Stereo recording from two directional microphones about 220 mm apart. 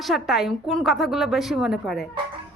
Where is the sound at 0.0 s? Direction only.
Centre (ahead or behind).